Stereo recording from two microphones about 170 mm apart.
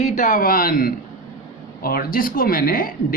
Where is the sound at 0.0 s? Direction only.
50° left (ahead or behind).